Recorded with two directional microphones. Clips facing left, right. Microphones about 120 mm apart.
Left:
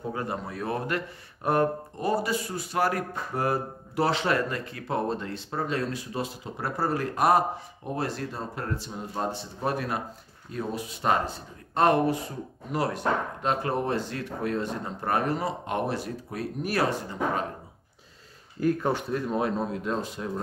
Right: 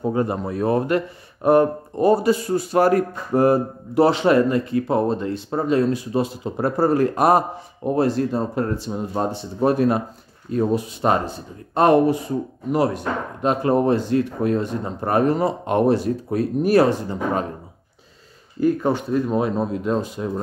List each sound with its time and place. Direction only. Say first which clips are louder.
0.1 s speech: right 10 dB; 25° right (ahead or behind)
2.0 s speech: right 11 dB; 30° right (ahead or behind)
18.6 s speech: right 6 dB; centre (ahead or behind)